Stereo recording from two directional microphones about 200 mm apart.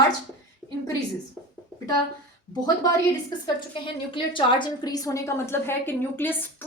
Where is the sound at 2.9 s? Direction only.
20° left (ahead or behind).